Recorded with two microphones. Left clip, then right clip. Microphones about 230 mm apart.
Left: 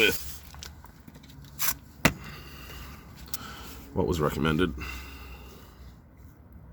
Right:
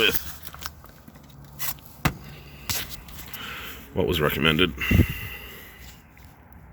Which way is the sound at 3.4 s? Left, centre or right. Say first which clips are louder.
Right 7 dB; centre.